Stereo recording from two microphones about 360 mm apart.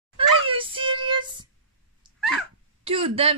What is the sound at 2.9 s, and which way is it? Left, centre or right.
Speech, centre.